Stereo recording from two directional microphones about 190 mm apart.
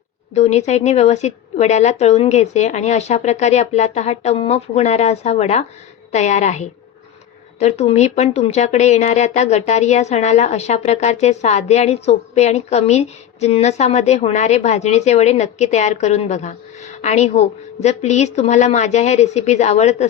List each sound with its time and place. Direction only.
0.3 s a woman's voice: 35° left (ahead or behind)